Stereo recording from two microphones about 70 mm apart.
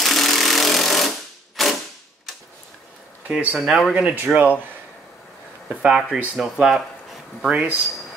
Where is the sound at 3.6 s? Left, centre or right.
Centre.